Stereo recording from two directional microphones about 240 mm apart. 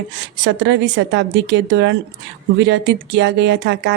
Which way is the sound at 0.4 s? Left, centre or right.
Right.